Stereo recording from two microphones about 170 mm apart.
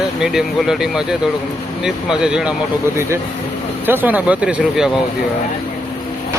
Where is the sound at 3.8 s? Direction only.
10° right (ahead or behind).